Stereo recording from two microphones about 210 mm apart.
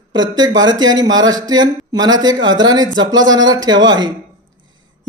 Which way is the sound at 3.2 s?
65° right (ahead or behind).